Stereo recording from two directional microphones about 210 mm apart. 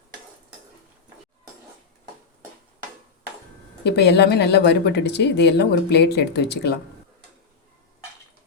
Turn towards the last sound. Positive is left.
turn(degrees=55)  # may be behind; listen again after turning